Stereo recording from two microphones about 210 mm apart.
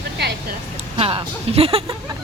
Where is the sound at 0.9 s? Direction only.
25° right (ahead or behind).